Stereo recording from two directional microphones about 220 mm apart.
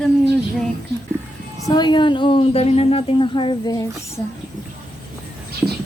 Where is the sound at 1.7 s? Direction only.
20° left (ahead or behind).